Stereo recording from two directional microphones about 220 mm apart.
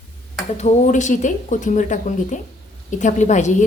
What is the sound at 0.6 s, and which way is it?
Speech, 35° left (ahead or behind).